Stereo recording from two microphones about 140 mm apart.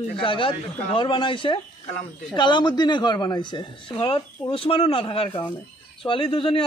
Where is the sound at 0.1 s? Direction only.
40° left (ahead or behind).